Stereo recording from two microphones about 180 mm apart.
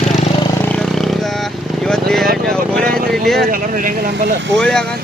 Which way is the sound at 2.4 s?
5° left (ahead or behind).